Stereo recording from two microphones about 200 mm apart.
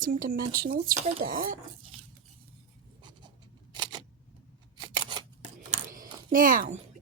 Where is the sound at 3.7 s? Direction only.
20° right (ahead or behind).